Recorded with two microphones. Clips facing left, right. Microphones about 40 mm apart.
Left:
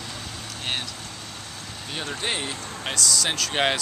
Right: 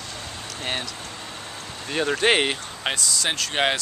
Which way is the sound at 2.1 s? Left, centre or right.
Right.